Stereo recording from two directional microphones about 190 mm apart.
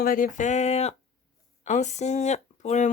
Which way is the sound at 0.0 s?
50° left (ahead or behind).